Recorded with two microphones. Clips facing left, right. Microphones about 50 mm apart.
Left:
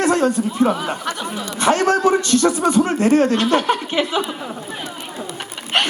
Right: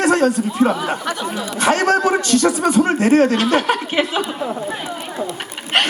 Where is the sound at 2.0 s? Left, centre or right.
Centre.